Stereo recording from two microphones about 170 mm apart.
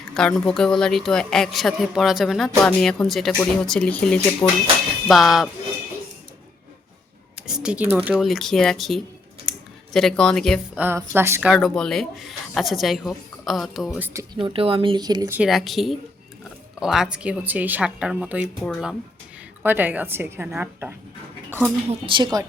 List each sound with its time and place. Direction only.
0.1 s speech: 5° left (ahead or behind)
4.4 s speech: 20° left (ahead or behind)
5.0 s speech: centre (ahead or behind)
7.4 s speech: 5° right (ahead or behind)
9.5 s a sound: 5° left (ahead or behind)
10.8 s speech: 10° right (ahead or behind)
14.3 s speech: 30° right (ahead or behind)
15.4 s a woman's voice: centre (ahead or behind)
19.6 s a woman's voice: 10° right (ahead or behind)
21.8 s speech: 30° right (ahead or behind)